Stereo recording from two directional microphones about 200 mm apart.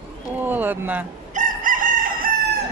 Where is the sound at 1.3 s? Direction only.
40° right (ahead or behind).